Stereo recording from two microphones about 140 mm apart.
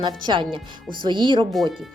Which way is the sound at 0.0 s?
35° right (ahead or behind).